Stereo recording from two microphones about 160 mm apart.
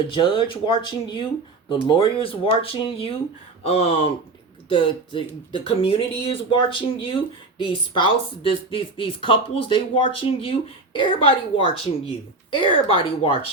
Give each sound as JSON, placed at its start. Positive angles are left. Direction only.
{"t": 0.1, "sound": "speech", "side_deg": 30}